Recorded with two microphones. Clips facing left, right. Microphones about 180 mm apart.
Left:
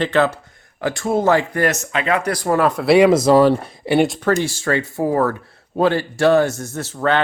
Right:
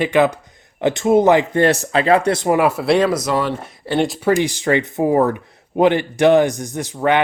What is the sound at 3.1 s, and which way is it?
Speech, 30° left (ahead or behind).